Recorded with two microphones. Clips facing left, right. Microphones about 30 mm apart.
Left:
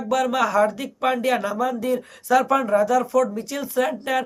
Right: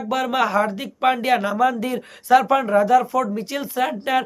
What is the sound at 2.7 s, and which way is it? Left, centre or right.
Speech, right.